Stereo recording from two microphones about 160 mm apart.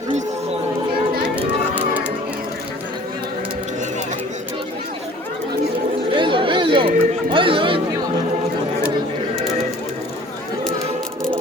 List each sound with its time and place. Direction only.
1.8 s music: 10° right (ahead or behind)
6.1 s chatter: 30° right (ahead or behind)